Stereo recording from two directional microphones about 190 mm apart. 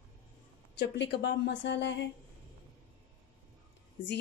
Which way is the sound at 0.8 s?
70° left (ahead or behind).